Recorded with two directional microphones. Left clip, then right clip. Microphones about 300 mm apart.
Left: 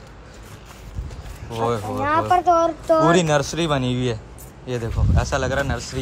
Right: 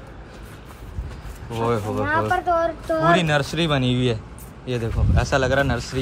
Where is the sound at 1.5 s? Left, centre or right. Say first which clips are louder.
Even; centre.